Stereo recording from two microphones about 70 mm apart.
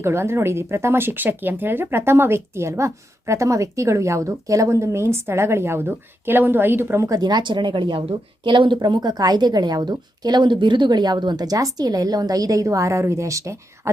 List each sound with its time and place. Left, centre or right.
0.0 s speech: right
7.2 s a woman's voice: right